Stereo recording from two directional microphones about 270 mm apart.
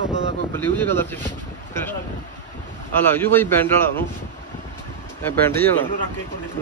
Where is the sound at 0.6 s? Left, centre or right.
Centre.